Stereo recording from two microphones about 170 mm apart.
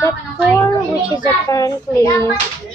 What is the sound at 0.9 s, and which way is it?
Child singing, 25° left (ahead or behind).